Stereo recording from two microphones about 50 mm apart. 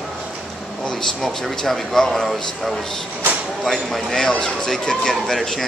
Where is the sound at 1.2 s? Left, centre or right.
Centre.